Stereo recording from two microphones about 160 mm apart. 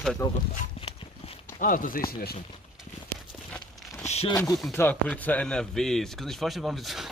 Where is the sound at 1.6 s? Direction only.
60° left (ahead or behind).